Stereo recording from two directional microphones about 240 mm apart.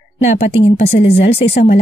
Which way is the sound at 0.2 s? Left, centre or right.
Left.